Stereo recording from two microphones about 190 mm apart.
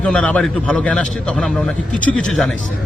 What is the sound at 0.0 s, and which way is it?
A man's voice, 5° left (ahead or behind).